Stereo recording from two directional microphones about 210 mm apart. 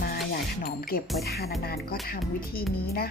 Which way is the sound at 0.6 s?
45° left (ahead or behind).